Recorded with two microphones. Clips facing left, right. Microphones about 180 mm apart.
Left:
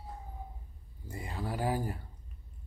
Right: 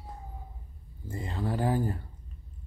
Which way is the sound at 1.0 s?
10° left (ahead or behind).